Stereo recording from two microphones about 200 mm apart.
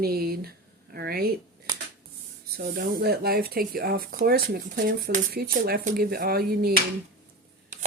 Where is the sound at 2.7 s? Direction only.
50° right (ahead or behind).